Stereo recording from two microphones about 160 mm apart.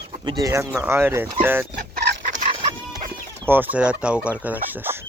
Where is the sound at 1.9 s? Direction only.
90° right.